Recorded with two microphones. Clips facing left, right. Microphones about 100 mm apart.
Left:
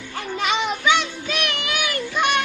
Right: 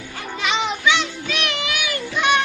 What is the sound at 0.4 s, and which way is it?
Children playing, 50° left (ahead or behind).